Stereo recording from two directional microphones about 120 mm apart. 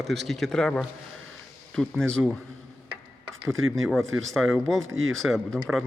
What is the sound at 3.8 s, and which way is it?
Speech, centre (ahead or behind).